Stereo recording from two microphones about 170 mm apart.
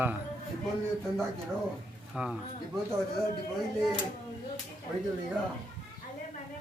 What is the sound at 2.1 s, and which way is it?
Speech, 5° right (ahead or behind).